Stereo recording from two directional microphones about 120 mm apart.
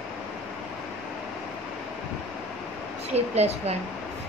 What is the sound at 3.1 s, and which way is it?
Speech, 60° right (ahead or behind).